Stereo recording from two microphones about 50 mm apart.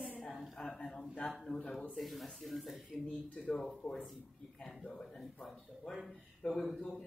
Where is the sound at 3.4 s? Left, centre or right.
Left.